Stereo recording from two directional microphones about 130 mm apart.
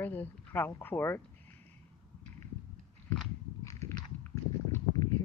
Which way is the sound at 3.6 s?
25° left (ahead or behind).